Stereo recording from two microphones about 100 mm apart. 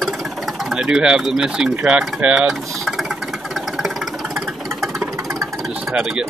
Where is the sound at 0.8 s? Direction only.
10° right (ahead or behind).